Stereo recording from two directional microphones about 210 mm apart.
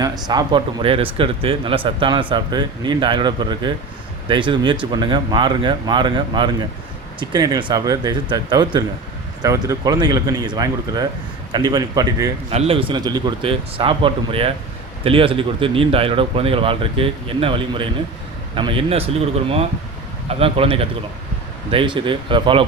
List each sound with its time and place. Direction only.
0.0 s speech: 20° right (ahead or behind)
12.5 s speech: 30° right (ahead or behind)